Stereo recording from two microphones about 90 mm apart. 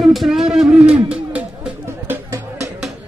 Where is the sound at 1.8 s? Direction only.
25° right (ahead or behind).